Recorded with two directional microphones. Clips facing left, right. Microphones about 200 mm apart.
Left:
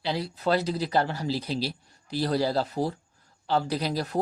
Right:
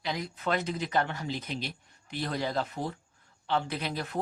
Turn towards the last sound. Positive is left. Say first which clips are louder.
# left 6 dB
turn(degrees=35)  # may be behind; listen again after turning